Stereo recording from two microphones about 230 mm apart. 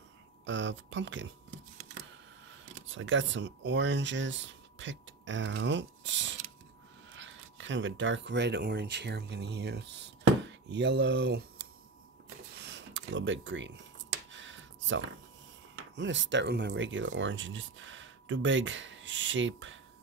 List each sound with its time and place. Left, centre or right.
0.5 s speech: right
2.6 s speech: right
12.6 s a sound: right
16.0 s speech: right